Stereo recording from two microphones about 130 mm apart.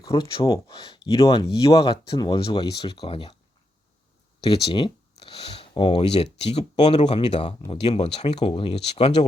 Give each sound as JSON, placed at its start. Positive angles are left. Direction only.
{"t": 0.0, "sound": "a sound", "side_deg": 30}
{"t": 0.4, "sound": "speech", "side_deg": 30}
{"t": 4.4, "sound": "speech", "side_deg": 40}